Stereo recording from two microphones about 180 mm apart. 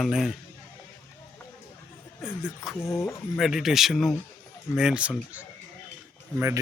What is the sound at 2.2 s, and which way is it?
Speech, 5° right (ahead or behind).